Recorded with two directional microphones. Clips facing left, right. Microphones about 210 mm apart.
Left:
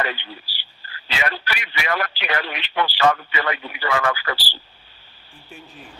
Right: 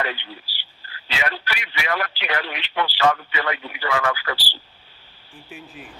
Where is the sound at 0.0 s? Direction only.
50° left (ahead or behind).